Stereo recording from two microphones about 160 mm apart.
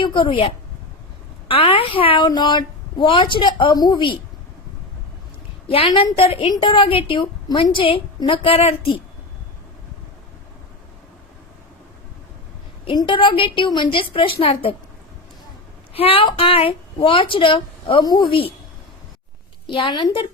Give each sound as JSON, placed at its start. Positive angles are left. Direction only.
{"t": 0.0, "sound": "a woman's voice", "side_deg": 30}
{"t": 5.6, "sound": "a woman's voice", "side_deg": 35}
{"t": 12.8, "sound": "a woman's voice", "side_deg": 30}
{"t": 15.9, "sound": "a woman's voice", "side_deg": 35}
{"t": 19.6, "sound": "a woman's voice", "side_deg": 30}